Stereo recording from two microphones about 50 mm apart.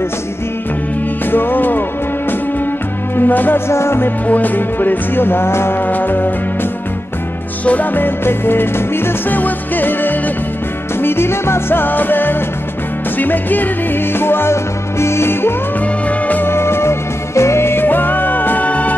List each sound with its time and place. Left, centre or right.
1.2 s music: left
3.2 s music: left
3.5 s music: left
4.3 s music: left
5.8 s music: left
7.6 s music: left
9.4 s music: left
11.0 s music: left
16.1 s music: left
16.4 s music: left